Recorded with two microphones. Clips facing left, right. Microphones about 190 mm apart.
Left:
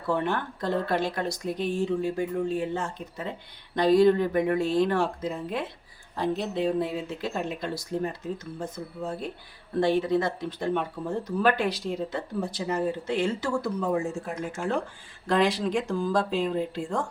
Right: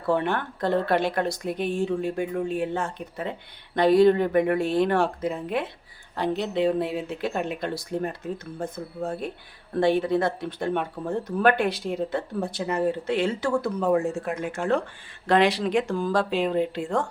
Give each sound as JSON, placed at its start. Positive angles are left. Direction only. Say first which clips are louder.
{"t": 0.1, "sound": "speech", "louder": "right 3 dB", "side_deg": -60}